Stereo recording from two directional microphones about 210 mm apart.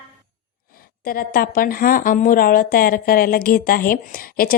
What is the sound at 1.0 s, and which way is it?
A woman's voice, 45° left (ahead or behind).